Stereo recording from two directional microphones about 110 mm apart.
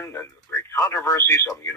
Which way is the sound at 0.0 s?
20° left (ahead or behind).